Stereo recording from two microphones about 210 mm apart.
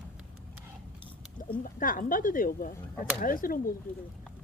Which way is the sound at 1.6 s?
40° left (ahead or behind).